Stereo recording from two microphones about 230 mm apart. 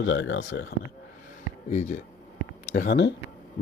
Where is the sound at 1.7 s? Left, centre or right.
Left.